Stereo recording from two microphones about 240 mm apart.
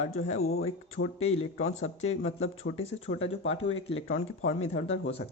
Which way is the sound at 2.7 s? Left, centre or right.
Left.